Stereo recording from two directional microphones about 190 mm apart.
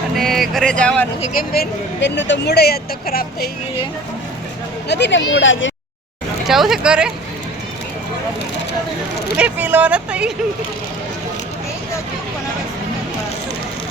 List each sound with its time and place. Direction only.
0.2 s speech: centre (ahead or behind)
1.2 s speech: 45° left (ahead or behind)
2.0 s a woman's voice: 70° left (ahead or behind); by 3.5 s 55° left (ahead or behind)
4.9 s speech: 65° left (ahead or behind); by 5.7 s 80° left
6.5 s speech: centre (ahead or behind)
9.4 s speech: 10° right (ahead or behind)